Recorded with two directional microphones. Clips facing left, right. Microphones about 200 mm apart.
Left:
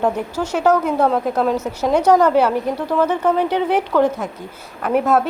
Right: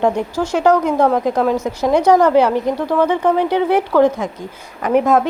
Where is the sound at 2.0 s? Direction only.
10° right (ahead or behind).